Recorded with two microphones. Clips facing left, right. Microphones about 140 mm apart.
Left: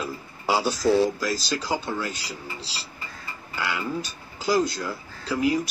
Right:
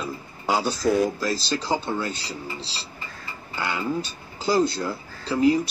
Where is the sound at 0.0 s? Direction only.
5° left (ahead or behind).